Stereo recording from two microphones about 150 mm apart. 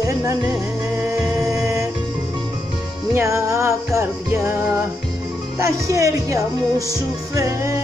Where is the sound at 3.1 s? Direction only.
20° right (ahead or behind).